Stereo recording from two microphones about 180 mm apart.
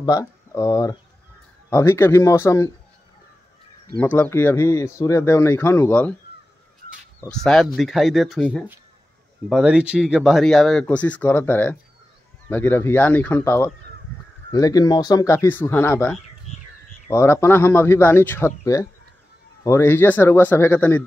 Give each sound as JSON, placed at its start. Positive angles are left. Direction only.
{"t": 0.0, "sound": "speech", "side_deg": 20}
{"t": 4.0, "sound": "speech", "side_deg": 10}
{"t": 7.2, "sound": "speech", "side_deg": 5}
{"t": 9.5, "sound": "speech", "side_deg": -5}